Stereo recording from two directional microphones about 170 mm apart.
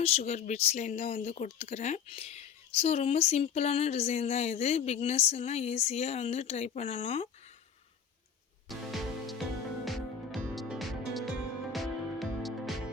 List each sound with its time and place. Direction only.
0.0 s speech: 40° left (ahead or behind)
8.6 s music: centre (ahead or behind)